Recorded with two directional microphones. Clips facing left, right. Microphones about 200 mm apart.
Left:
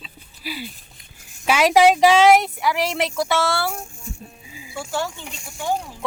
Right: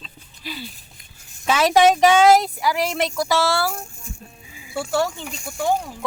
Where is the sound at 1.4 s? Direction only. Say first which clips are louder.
Left 1 dB; 10° left (ahead or behind).